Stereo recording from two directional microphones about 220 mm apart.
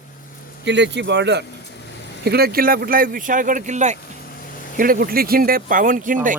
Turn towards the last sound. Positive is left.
turn(degrees=-35)  # may be behind; listen again after turning